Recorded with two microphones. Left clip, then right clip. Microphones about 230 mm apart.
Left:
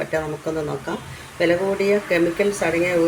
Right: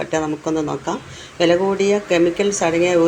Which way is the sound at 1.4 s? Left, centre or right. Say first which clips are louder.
Right 3 dB; right.